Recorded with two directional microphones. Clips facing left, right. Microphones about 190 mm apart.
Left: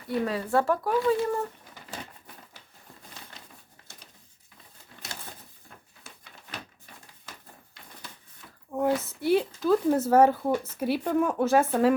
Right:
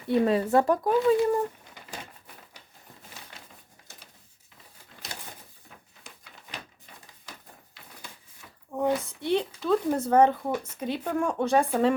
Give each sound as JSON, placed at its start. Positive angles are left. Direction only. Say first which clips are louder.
{"t": 0.1, "sound": "speech", "louder": "right 4 dB", "side_deg": -25}
{"t": 8.7, "sound": "a woman's voice", "louder": "left 1 dB", "side_deg": 0}